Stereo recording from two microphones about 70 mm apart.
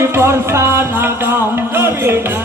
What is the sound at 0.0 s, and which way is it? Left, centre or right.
Music, right.